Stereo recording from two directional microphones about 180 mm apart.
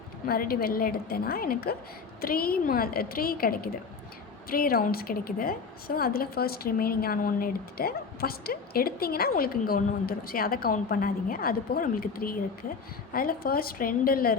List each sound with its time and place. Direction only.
0.3 s a woman's voice: 55° left (ahead or behind)